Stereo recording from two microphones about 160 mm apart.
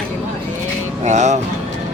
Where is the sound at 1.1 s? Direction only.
45° right (ahead or behind).